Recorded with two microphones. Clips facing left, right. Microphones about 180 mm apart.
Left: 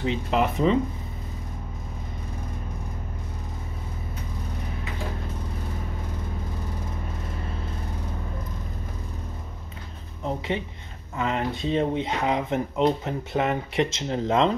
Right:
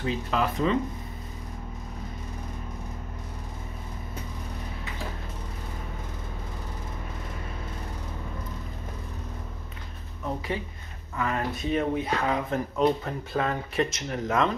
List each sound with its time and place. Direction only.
0.0 s speech: 20° left (ahead or behind)
10.2 s speech: 25° left (ahead or behind)